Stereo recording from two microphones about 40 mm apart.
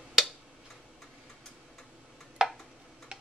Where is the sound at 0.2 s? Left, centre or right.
Centre.